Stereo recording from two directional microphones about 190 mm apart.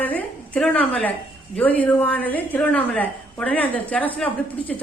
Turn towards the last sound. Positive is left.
turn(degrees=5)  # may be behind; listen again after turning